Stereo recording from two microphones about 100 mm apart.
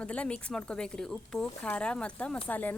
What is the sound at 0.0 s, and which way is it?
Speech, 10° left (ahead or behind).